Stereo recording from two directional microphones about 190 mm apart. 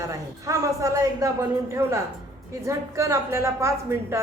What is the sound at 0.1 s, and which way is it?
A woman's voice, 15° right (ahead or behind).